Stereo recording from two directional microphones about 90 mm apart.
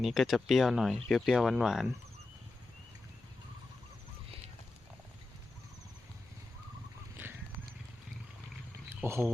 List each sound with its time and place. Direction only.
0.0 s speech: centre (ahead or behind)
7.2 s horse: 25° right (ahead or behind)
9.0 s speech: 25° right (ahead or behind)